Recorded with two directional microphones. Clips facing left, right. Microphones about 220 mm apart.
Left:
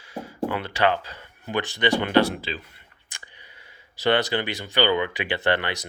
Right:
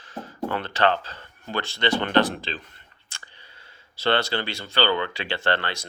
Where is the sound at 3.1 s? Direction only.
15° left (ahead or behind).